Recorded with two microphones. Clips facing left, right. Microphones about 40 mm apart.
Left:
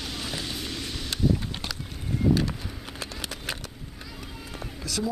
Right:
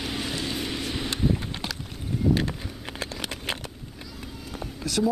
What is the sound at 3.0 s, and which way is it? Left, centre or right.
Horse, right.